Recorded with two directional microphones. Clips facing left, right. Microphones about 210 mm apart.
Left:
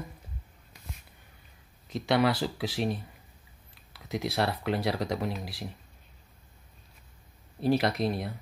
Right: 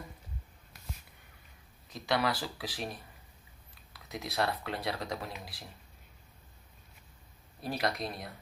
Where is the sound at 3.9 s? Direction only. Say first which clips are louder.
Left 8 dB; 30° left (ahead or behind).